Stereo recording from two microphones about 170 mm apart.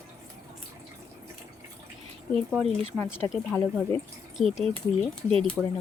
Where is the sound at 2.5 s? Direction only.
Centre (ahead or behind).